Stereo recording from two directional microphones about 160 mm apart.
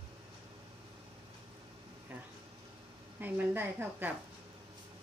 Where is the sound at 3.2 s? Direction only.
10° right (ahead or behind).